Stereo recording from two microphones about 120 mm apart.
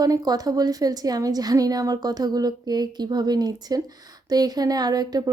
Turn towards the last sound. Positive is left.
turn(degrees=-30)  # may be behind; listen again after turning